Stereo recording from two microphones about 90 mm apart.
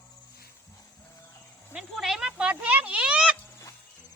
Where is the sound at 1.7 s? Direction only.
Centre (ahead or behind).